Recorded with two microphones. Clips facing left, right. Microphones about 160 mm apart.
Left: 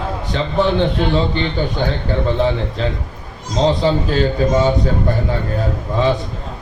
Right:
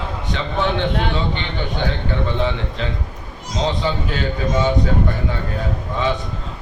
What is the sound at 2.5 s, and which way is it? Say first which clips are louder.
A man's voice: left 5 dB; 35° left (ahead or behind).